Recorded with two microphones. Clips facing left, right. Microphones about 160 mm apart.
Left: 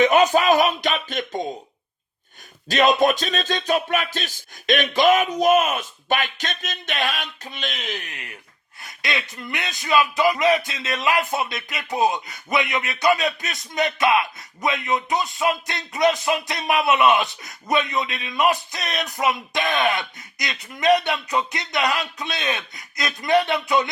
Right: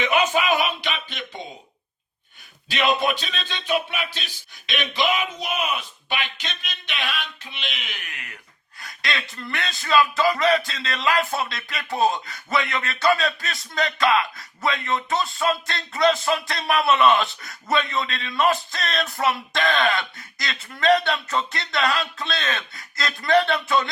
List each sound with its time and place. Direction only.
0.0 s music: 40° left (ahead or behind)
2.6 s music: 40° left (ahead or behind)
8.0 s speech: 30° left (ahead or behind)